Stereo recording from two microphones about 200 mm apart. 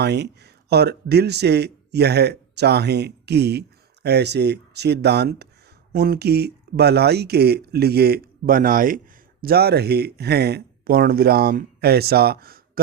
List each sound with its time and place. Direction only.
0.0 s speech: 55° right (ahead or behind)